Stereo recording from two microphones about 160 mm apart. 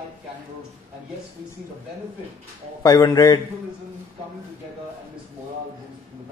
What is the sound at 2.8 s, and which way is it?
Speech, 20° left (ahead or behind).